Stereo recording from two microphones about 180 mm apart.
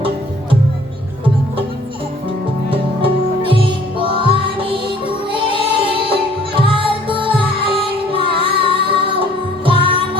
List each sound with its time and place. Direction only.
2.6 s music: 30° right (ahead or behind)